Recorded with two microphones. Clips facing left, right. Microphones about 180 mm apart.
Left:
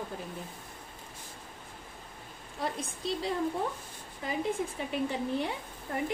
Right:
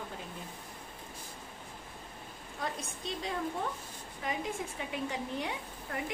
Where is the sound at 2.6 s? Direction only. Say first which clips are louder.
Left 4 dB; 30° left (ahead or behind).